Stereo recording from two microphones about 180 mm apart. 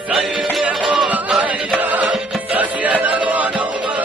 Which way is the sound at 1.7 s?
10° right (ahead or behind).